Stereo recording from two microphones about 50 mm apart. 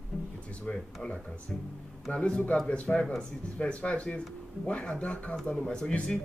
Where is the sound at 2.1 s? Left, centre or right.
Left.